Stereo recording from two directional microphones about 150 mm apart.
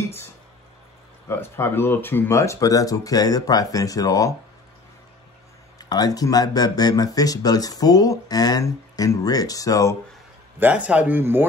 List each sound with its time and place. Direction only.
1.3 s speech: 15° left (ahead or behind)
5.8 s speech: 25° left (ahead or behind)
10.6 s speech: 10° right (ahead or behind)